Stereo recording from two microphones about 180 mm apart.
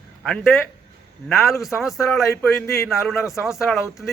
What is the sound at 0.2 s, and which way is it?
A man's voice, centre (ahead or behind).